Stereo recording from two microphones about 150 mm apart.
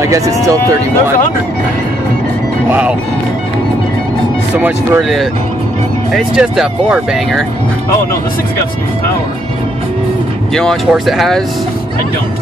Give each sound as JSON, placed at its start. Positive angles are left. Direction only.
{"t": 0.0, "sound": "speech", "side_deg": -20}
{"t": 2.7, "sound": "speech", "side_deg": -10}
{"t": 4.6, "sound": "speech", "side_deg": -10}
{"t": 6.1, "sound": "speech", "side_deg": -5}
{"t": 10.5, "sound": "speech", "side_deg": 5}